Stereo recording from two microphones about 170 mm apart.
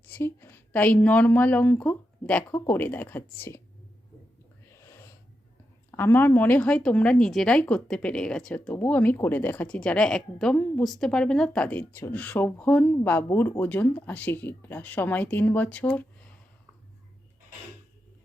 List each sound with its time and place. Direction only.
0.1 s speech: 15° left (ahead or behind)
4.7 s a sound: 15° left (ahead or behind)
5.9 s speech: 15° left (ahead or behind)